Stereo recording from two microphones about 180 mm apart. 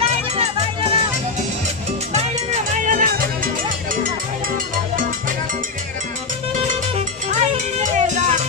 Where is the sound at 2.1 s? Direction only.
40° right (ahead or behind).